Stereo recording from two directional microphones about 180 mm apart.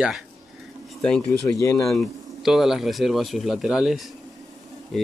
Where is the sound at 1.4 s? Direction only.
20° left (ahead or behind).